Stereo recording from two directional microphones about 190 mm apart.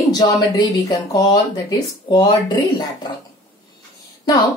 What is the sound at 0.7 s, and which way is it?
A woman's voice, 20° left (ahead or behind).